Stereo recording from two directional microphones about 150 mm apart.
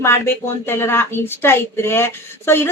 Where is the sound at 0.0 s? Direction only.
15° left (ahead or behind).